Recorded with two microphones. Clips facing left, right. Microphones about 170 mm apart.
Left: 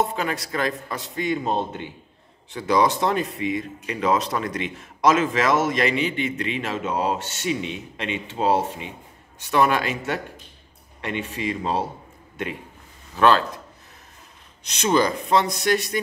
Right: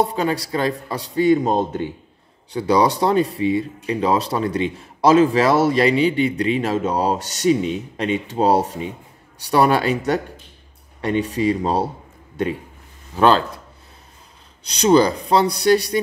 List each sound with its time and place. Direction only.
0.0 s speech: 35° right (ahead or behind)
14.6 s speech: 35° right (ahead or behind)